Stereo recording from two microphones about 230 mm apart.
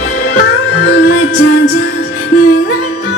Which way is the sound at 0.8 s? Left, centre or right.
Left.